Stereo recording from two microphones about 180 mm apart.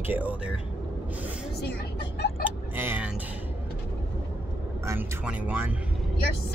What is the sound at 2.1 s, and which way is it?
Vehicle, 65° left (ahead or behind).